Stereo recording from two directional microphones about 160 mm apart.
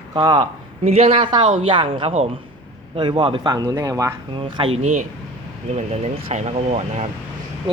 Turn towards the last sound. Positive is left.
turn(degrees=-40)  # may be behind; listen again after turning